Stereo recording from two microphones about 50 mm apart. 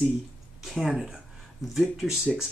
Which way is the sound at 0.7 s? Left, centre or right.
Centre.